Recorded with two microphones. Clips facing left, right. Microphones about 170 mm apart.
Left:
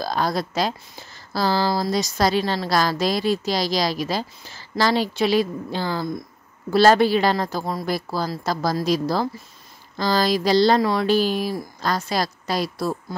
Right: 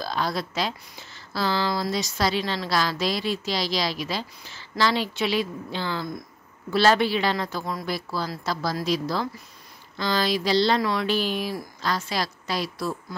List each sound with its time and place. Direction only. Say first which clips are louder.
0.0 s speech: left 4 dB; 40° left (ahead or behind)